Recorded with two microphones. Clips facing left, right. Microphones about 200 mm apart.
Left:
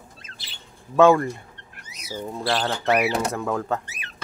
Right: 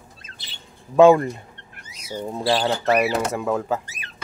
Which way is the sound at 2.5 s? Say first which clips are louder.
Right 3 dB; 10° right (ahead or behind).